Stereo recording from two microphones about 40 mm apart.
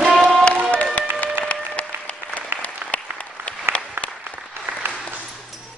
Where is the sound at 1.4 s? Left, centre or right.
Left.